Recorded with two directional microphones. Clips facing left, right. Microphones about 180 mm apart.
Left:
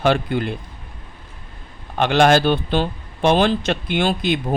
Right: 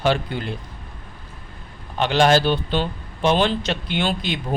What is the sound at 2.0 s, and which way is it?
A man's voice, 55° left (ahead or behind).